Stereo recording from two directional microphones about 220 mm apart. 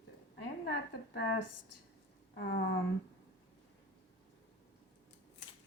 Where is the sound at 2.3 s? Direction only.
50° left (ahead or behind).